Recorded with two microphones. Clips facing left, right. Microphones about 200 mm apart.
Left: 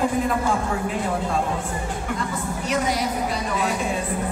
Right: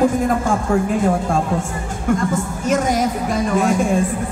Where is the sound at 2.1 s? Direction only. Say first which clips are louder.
Right 9 dB; 45° right (ahead or behind).